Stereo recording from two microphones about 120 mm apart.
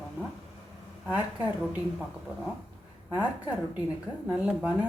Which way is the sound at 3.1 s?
10° right (ahead or behind).